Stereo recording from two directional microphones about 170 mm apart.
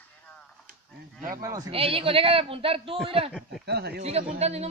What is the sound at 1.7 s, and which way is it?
A man's voice, 35° right (ahead or behind).